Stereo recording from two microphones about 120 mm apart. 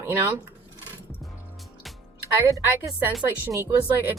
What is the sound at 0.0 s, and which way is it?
Speech, 20° right (ahead or behind).